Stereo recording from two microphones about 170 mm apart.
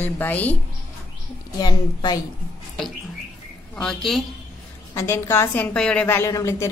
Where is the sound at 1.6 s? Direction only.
25° left (ahead or behind).